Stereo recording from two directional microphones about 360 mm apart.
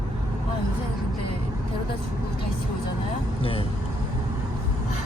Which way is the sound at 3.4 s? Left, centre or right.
Centre.